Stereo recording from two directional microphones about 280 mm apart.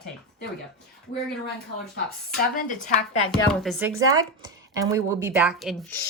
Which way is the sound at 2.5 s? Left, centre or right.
Left.